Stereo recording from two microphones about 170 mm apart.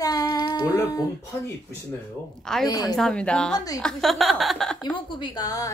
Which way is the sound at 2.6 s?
20° left (ahead or behind).